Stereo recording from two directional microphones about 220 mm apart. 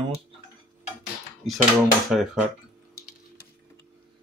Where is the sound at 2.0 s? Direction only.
Centre (ahead or behind).